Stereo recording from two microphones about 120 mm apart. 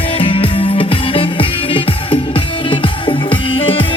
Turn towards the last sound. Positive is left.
turn(degrees=50)  # may be behind; listen again after turning